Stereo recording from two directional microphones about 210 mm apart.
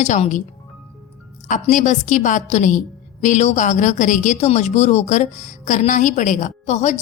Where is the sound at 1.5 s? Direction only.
35° left (ahead or behind).